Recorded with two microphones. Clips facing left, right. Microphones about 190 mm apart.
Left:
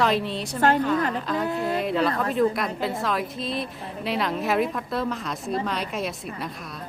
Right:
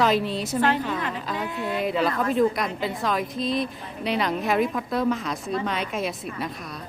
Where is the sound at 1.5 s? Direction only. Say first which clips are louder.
Left 3 dB; 40° left (ahead or behind).